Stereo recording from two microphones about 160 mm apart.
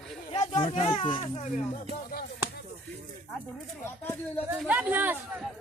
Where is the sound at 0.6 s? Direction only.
40° left (ahead or behind).